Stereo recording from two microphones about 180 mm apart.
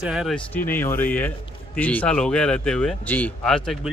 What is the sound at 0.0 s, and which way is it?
Speech, 5° right (ahead or behind).